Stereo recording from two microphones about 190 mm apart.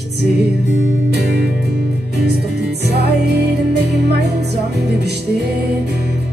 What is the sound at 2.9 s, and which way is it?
Music, 60° right (ahead or behind).